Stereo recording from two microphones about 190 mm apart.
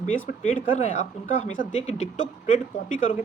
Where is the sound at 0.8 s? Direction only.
40° left (ahead or behind).